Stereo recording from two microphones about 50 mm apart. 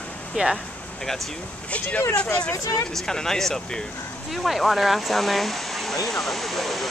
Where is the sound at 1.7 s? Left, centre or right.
Left.